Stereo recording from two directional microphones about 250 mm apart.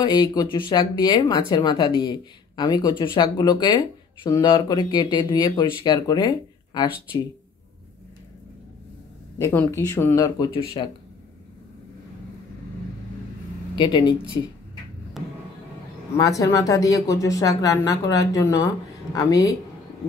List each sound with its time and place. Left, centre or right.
0.0 s speech: centre
9.4 s speech: centre
13.7 s speech: centre
16.2 s speech: centre